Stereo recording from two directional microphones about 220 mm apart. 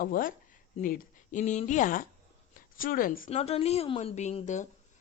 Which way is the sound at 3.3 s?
30° left (ahead or behind).